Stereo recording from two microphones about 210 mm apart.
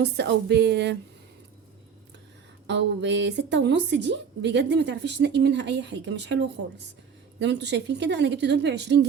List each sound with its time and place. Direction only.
0.0 s a woman's voice: 55° right (ahead or behind)
2.6 s speech: 55° right (ahead or behind)